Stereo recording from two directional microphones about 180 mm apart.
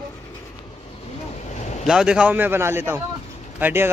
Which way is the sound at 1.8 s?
5° right (ahead or behind).